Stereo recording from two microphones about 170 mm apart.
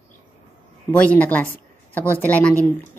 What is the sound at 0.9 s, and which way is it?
A woman's voice, 10° left (ahead or behind).